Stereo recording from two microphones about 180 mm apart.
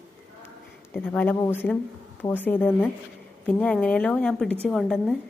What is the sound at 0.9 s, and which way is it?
A woman's voice, 10° left (ahead or behind).